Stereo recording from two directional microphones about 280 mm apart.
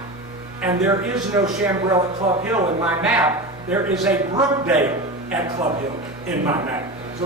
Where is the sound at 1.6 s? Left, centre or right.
Centre.